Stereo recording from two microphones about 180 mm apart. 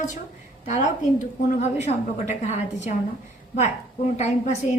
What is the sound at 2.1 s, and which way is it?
A woman's voice, 40° left (ahead or behind).